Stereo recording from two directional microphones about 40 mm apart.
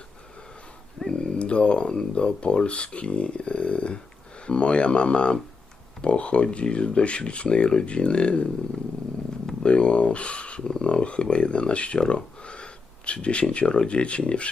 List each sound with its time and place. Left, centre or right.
1.1 s speech: left
9.6 s speech: left